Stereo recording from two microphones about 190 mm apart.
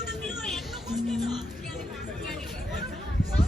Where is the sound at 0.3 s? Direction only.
Centre (ahead or behind).